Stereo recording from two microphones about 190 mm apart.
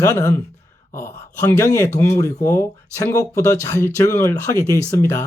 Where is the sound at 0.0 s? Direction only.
15° left (ahead or behind).